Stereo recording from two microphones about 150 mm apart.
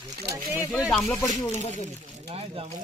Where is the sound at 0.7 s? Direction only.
5° right (ahead or behind).